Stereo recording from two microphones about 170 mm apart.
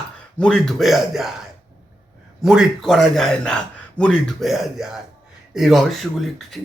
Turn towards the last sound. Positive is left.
turn(degrees=0)  # may be behind; listen again after turning